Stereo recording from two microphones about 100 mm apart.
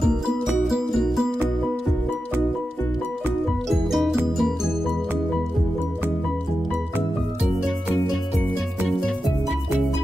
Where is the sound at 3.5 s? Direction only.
Centre (ahead or behind).